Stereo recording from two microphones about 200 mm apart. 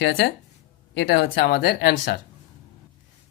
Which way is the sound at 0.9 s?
60° left (ahead or behind).